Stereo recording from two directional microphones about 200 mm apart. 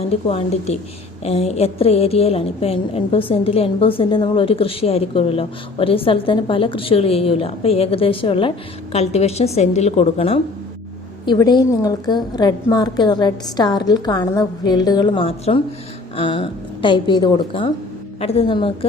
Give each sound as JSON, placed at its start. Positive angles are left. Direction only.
{"t": 0.1, "sound": "a woman's voice", "side_deg": 30}